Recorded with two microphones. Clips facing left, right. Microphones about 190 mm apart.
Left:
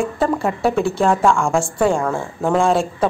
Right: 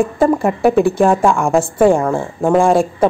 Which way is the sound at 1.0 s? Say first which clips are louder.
Right 3 dB; 15° right (ahead or behind).